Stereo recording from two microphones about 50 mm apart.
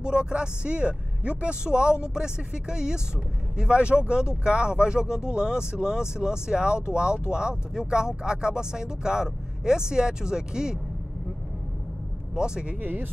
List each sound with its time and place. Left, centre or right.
0.0 s speech: centre
12.4 s speech: centre
12.8 s speech: right